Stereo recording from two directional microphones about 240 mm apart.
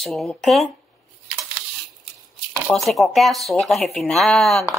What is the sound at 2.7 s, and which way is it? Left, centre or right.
Speech, centre.